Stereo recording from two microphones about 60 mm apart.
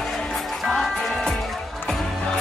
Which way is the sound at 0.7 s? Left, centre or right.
Centre.